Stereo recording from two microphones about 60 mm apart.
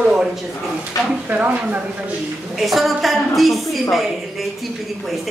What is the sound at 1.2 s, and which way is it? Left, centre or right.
Speech, right.